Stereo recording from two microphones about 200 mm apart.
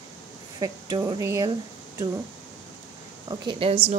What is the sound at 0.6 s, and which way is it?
Speech, 20° right (ahead or behind).